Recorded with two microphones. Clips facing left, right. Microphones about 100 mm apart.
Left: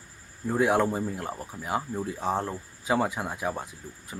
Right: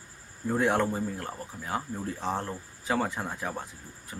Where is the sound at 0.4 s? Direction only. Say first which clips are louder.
Left 2 dB; 5° left (ahead or behind).